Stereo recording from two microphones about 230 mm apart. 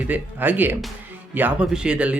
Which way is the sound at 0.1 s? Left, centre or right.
Centre.